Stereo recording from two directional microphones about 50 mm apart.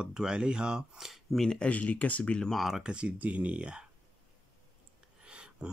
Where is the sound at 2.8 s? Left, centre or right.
Right.